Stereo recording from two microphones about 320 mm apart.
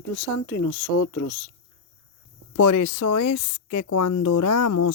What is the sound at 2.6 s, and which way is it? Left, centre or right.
Speech, left.